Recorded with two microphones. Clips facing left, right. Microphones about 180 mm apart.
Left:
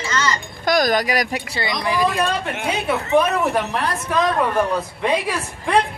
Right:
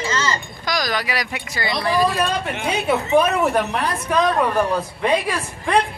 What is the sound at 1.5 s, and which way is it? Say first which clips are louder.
Speech: right 3 dB; 20° left (ahead or behind).